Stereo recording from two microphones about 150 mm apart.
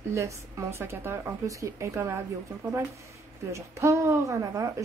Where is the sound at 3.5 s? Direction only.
20° right (ahead or behind).